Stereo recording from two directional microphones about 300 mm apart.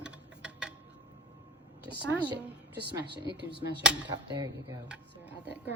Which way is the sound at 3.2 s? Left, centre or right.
Right.